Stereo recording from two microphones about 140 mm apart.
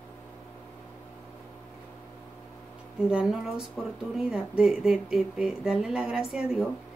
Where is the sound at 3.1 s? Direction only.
5° right (ahead or behind).